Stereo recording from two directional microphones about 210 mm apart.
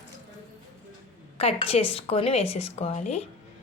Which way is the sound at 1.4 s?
30° left (ahead or behind).